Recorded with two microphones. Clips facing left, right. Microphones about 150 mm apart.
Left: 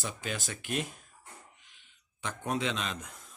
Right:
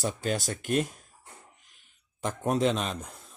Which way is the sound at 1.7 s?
45° right (ahead or behind).